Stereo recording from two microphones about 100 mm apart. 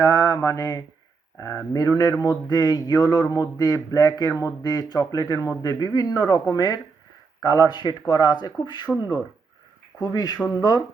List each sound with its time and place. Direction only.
0.0 s speech: 35° left (ahead or behind)
9.0 s speech: 25° right (ahead or behind)
10.0 s speech: 40° left (ahead or behind)